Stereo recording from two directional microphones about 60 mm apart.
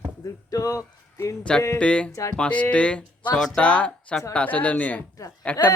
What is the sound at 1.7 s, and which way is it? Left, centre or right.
Speech, centre.